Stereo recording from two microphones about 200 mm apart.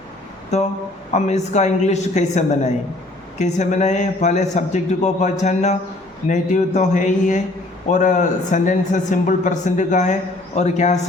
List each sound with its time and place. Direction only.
0.5 s a man's voice: 35° left (ahead or behind)